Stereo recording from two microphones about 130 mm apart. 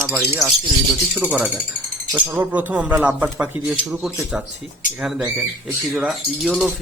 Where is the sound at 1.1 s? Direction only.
10° right (ahead or behind).